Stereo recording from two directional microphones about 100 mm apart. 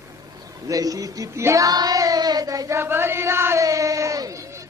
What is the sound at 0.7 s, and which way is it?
Child singing, 35° right (ahead or behind).